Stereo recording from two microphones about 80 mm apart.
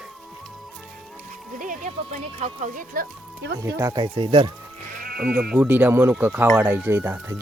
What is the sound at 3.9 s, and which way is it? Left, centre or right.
Speech, right.